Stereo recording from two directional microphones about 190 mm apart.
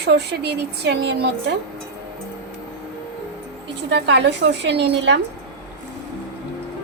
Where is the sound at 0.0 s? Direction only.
60° right (ahead or behind).